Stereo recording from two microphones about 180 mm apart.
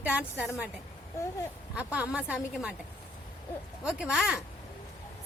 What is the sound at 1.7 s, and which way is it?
A woman's voice, 10° right (ahead or behind).